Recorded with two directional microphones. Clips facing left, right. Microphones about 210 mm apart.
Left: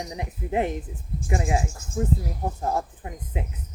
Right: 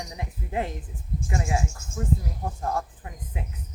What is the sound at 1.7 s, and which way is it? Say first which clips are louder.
Speech: left 6 dB; 35° left (ahead or behind).